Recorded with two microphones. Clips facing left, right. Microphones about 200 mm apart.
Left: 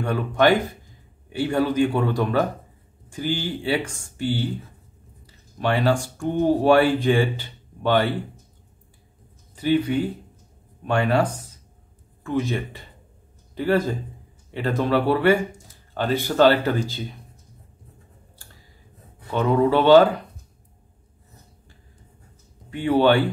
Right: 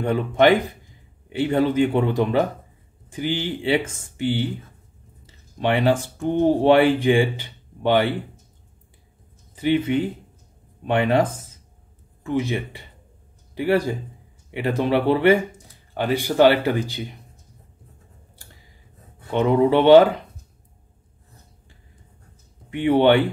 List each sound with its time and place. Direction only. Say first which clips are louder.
0.0 s speech: right 2 dB; 20° right (ahead or behind)
5.2 s a sound: right 2 dB; 20° right (ahead or behind)
6.1 s speech: right 2 dB; 20° right (ahead or behind)
9.6 s speech: right 1 dB; 20° right (ahead or behind)
19.3 s speech: right 2 dB; 20° right (ahead or behind)
22.7 s speech: right 2 dB; 20° right (ahead or behind)